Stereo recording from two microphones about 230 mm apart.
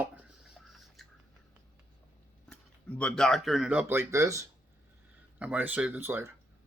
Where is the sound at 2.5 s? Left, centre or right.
Centre.